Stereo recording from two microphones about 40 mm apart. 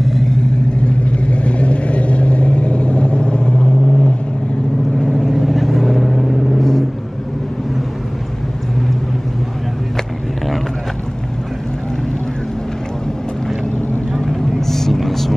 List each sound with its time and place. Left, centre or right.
0.0 s vehicle: centre
0.8 s vehicle: left
5.1 s vehicle: centre
14.3 s vehicle: centre